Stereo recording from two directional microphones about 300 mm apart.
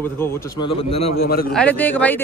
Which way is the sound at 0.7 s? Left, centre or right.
Centre.